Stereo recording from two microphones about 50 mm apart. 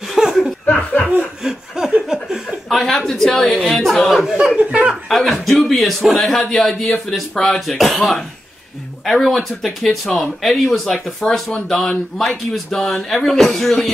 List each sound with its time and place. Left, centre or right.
0.1 s chuckle: centre
0.7 s chuckle: left
1.4 s snicker: centre
2.7 s speech: centre